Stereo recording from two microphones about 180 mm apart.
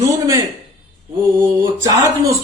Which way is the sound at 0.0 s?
20° right (ahead or behind).